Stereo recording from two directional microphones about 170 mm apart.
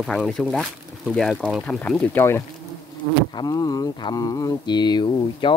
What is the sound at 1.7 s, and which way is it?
Speech, 10° left (ahead or behind).